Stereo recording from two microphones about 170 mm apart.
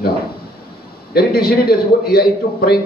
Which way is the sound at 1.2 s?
65° left (ahead or behind).